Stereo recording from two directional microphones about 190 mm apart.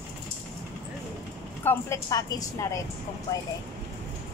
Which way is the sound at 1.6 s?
15° left (ahead or behind).